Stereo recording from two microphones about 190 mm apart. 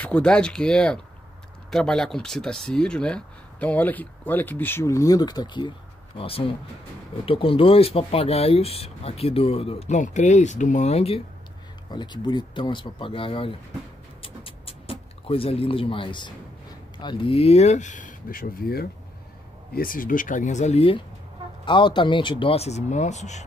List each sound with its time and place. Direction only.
0.0 s speech: 5° left (ahead or behind); by 13.6 s 30° left (ahead or behind)
14.2 s music: 30° left (ahead or behind)
17.0 s speech: 25° left (ahead or behind)